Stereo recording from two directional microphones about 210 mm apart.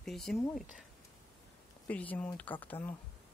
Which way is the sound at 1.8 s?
5° left (ahead or behind).